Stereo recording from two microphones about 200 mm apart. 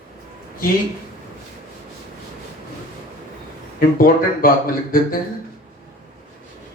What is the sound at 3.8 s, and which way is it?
Speech, 45° left (ahead or behind).